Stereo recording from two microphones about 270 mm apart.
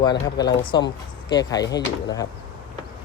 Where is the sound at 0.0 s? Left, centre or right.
Centre.